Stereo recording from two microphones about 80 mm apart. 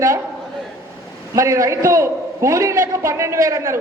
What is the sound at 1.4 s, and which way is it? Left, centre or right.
A man's voice, right.